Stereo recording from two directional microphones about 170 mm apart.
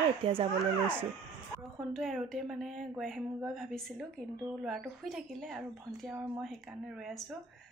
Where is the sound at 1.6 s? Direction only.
Centre (ahead or behind).